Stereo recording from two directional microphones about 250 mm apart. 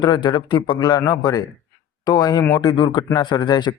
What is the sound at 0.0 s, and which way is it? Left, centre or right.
Speech, centre.